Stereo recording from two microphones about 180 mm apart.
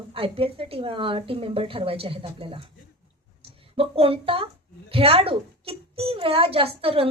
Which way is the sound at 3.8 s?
30° right (ahead or behind).